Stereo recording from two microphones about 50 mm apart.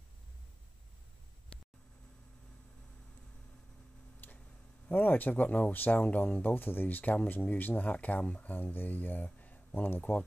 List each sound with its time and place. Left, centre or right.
4.2 s tick-tock: left
4.8 s speech: left
8.5 s speech: left
10.1 s speech: left